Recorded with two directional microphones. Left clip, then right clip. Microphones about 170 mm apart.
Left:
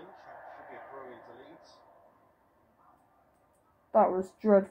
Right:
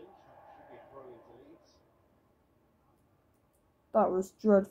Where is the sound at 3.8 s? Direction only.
20° right (ahead or behind).